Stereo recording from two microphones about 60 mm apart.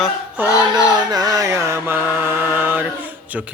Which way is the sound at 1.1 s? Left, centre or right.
Right.